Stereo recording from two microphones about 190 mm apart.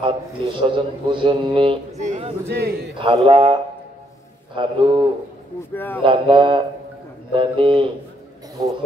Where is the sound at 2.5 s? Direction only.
55° right (ahead or behind).